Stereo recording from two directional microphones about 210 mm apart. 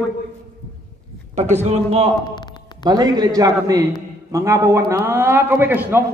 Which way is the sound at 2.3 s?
20° left (ahead or behind).